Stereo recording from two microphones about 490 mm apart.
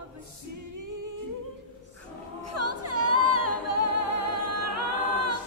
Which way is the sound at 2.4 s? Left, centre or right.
Right.